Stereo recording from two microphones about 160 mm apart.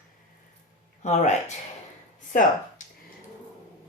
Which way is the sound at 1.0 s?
45° left (ahead or behind).